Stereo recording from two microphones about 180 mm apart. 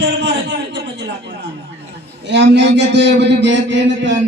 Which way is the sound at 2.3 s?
75° right (ahead or behind).